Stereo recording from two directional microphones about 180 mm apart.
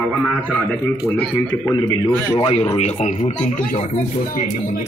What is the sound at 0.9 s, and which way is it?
Speech, 15° left (ahead or behind).